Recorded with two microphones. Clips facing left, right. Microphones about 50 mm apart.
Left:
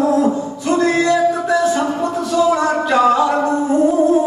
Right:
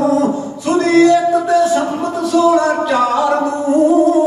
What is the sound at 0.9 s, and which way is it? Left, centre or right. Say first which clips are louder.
Music: right 9 dB; left.